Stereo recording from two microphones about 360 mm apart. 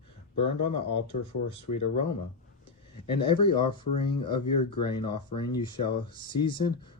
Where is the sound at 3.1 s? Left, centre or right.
Centre.